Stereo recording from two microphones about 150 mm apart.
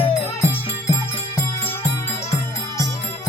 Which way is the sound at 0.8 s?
20° left (ahead or behind).